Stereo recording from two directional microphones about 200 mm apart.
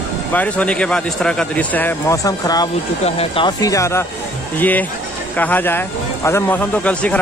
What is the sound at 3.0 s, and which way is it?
Speech, 30° left (ahead or behind).